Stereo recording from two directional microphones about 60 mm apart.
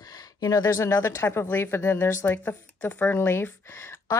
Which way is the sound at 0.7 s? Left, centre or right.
Left.